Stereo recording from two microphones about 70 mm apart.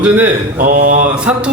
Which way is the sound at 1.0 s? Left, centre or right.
Centre.